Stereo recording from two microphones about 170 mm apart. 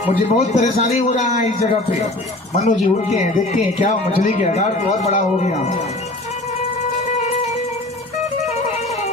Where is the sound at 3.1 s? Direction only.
45° left (ahead or behind).